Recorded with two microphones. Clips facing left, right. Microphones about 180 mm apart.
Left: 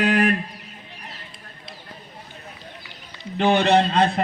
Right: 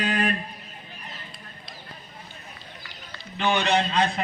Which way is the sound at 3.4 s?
60° left (ahead or behind).